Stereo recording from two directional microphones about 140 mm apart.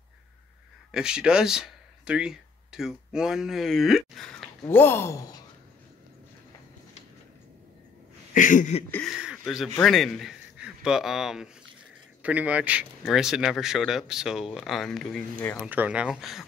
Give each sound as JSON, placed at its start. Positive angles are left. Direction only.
{"t": 0.9, "sound": "speech", "side_deg": -5}
{"t": 4.6, "sound": "speech", "side_deg": 15}
{"t": 8.3, "sound": "a sound", "side_deg": 70}
{"t": 9.0, "sound": "a man's voice", "side_deg": -5}
{"t": 15.6, "sound": "speech", "side_deg": -10}